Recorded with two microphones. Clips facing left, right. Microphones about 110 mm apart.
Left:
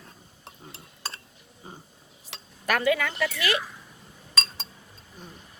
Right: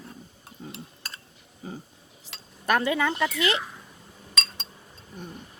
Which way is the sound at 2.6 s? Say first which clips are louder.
Right 1 dB; 25° right (ahead or behind).